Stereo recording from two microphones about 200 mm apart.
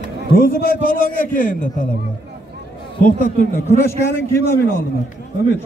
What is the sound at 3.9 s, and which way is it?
Speech, 15° left (ahead or behind).